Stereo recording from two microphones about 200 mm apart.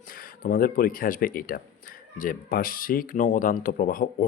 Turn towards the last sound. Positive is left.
turn(degrees=45)  # may be behind; listen again after turning